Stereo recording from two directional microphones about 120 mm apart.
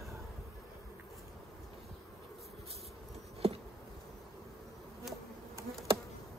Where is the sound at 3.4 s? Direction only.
55° right (ahead or behind).